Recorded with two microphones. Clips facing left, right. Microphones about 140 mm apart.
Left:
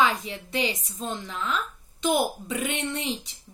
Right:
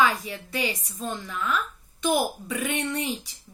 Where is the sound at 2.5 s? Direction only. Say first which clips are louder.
Right 1 dB; 25° left (ahead or behind).